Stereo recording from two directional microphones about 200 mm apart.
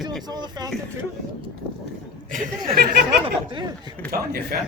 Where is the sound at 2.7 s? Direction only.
50° right (ahead or behind).